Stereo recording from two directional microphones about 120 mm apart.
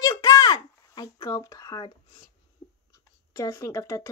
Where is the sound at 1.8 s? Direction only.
40° left (ahead or behind).